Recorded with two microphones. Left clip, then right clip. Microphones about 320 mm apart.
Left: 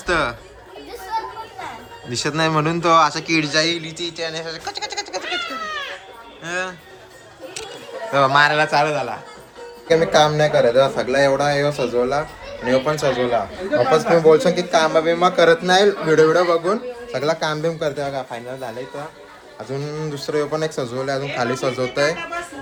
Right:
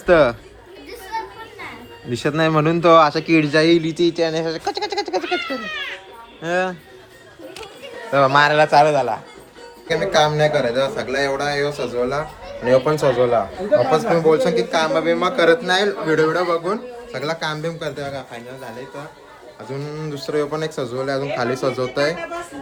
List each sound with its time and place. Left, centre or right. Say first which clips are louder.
0.0 s speech: right 6 dB; centre
2.0 s a man's voice: right 1 dB; centre
6.4 s a man's voice: right 5 dB; centre
8.1 s a man's voice: right 1 dB; centre
12.6 s speech: right 3 dB; right
13.9 s a man's voice: left 2 dB; centre
19.6 s speech: left 2 dB; centre